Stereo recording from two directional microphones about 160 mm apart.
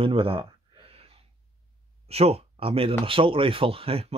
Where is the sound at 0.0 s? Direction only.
35° right (ahead or behind).